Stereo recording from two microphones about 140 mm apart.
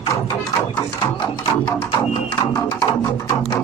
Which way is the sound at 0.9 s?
30° left (ahead or behind).